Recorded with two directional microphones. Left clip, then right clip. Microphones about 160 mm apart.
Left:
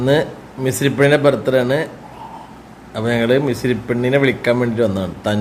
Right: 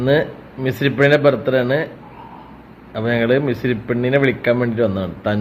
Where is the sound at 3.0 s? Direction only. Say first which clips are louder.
Left 1 dB; 20° left (ahead or behind).